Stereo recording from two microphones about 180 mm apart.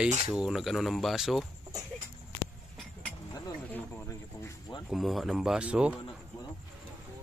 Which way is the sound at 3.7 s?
15° left (ahead or behind).